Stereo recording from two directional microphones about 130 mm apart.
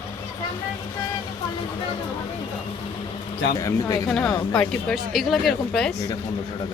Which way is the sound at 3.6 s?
25° left (ahead or behind).